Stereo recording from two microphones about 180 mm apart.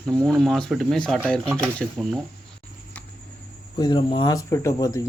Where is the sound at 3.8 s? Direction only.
25° left (ahead or behind).